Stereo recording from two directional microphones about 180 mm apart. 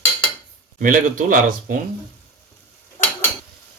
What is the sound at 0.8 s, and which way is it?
Speech, 50° right (ahead or behind).